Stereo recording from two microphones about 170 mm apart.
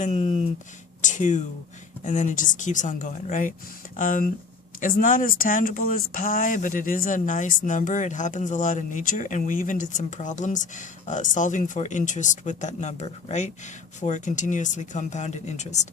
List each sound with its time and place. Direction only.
0.0 s speech: 40° left (ahead or behind)